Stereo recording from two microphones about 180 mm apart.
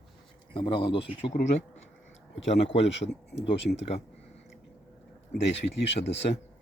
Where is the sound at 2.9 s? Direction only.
80° left.